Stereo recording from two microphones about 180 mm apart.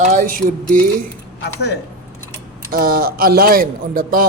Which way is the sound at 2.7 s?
55° right (ahead or behind).